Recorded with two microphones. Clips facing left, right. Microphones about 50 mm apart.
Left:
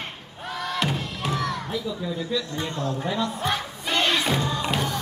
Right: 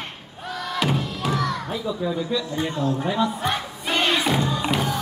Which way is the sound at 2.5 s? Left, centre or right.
Centre.